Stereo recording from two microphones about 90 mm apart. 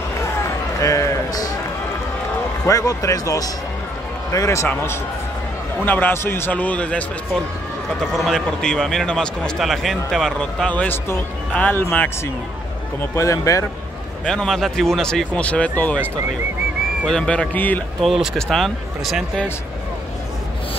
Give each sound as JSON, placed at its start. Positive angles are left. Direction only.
{"t": 0.7, "sound": "a sound", "side_deg": 40}
{"t": 2.6, "sound": "speech", "side_deg": 40}
{"t": 5.9, "sound": "speech", "side_deg": 20}
{"t": 8.1, "sound": "a man's voice", "side_deg": 5}
{"t": 10.7, "sound": "speech", "side_deg": 20}
{"t": 13.1, "sound": "speech", "side_deg": 35}
{"t": 14.2, "sound": "a man's voice", "side_deg": 5}
{"t": 17.0, "sound": "a man's voice", "side_deg": 10}
{"t": 18.0, "sound": "speech", "side_deg": 0}